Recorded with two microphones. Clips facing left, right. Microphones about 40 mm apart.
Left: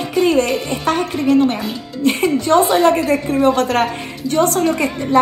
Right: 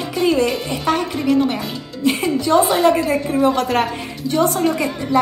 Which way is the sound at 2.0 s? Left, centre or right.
Left.